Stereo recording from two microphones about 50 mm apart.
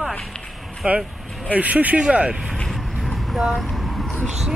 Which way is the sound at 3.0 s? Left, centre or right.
Centre.